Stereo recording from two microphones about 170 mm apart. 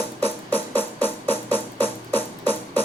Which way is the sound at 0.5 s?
10° left (ahead or behind).